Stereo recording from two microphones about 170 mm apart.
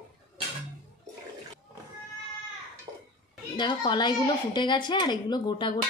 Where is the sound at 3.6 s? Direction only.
25° left (ahead or behind).